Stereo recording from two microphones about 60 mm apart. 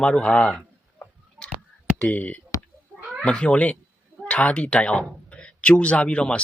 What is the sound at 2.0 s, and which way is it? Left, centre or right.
Speech, left.